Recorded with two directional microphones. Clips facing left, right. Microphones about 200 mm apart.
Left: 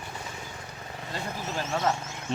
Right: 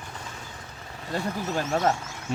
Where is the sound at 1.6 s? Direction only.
45° right (ahead or behind).